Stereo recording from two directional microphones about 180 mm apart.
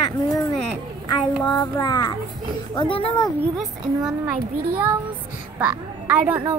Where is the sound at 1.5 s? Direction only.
20° left (ahead or behind).